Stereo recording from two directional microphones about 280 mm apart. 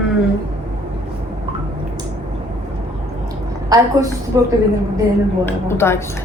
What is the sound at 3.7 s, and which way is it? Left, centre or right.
Speech, centre.